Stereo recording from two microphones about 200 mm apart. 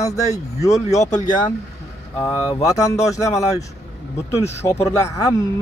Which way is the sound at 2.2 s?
15° left (ahead or behind).